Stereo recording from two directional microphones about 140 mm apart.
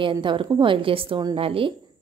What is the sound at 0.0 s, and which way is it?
A woman's voice, 35° right (ahead or behind).